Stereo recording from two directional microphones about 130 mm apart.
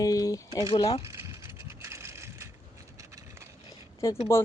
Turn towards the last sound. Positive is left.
turn(degrees=20)  # may be behind; listen again after turning